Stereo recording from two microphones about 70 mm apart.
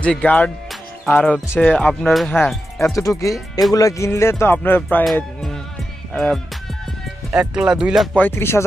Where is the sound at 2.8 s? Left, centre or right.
Left.